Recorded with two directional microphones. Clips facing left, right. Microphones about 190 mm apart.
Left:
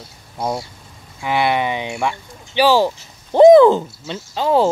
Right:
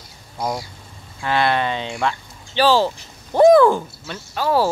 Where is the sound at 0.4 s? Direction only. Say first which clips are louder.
Left 2 dB; 25° left (ahead or behind).